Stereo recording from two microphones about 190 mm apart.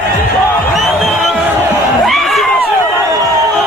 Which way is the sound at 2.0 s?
Centre (ahead or behind).